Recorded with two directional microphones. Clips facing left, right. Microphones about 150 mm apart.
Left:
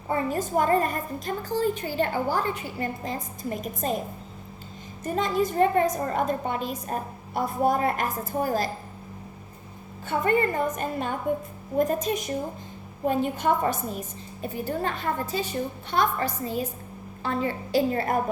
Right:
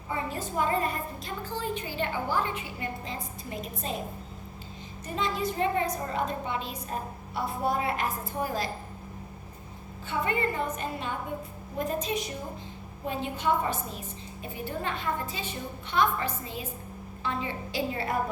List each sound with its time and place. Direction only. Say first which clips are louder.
0.1 s a woman's voice: left 7 dB; 50° left (ahead or behind)
5.0 s a woman's voice: left 5 dB; 45° left (ahead or behind)
10.1 s a woman's voice: left 6 dB; 45° left (ahead or behind)